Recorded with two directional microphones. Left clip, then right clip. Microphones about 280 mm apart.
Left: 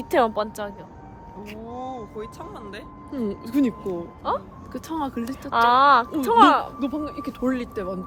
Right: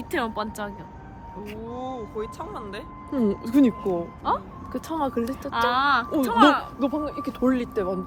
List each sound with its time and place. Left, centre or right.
0.0 s speech: left
0.3 s speech: centre
1.9 s speech: centre
3.1 s speech: centre
4.2 s speech: centre
4.7 s speech: centre
5.4 s speech: left
6.7 s speech: centre